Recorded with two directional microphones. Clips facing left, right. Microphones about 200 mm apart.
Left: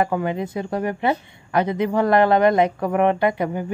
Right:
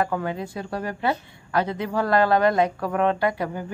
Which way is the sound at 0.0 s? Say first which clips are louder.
Left 4 dB; 20° left (ahead or behind).